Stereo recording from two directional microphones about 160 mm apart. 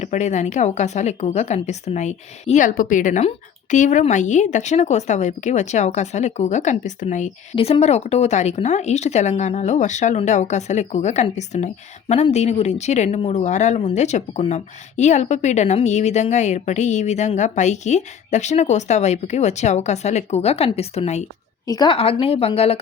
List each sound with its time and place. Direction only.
0.0 s speech: 50° left (ahead or behind)
7.5 s speech: 40° left (ahead or behind)
21.7 s a woman's voice: 25° left (ahead or behind)
21.9 s speech: 35° left (ahead or behind)